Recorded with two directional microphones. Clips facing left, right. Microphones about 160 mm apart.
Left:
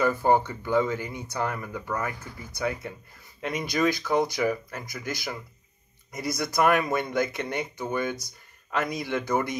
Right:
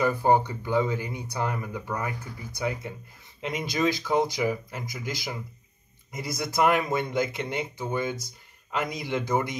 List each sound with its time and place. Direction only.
0.0 s speech: 15° right (ahead or behind)